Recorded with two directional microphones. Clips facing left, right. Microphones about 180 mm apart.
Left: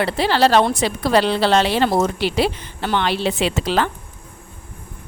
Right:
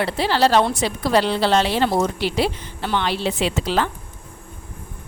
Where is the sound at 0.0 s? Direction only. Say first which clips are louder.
Left 2 dB; 75° left (ahead or behind).